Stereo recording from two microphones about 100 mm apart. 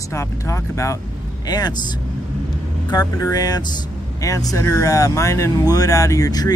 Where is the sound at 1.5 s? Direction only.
45° left (ahead or behind).